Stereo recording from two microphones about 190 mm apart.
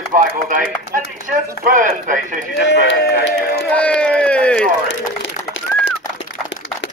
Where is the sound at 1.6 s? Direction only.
45° right (ahead or behind).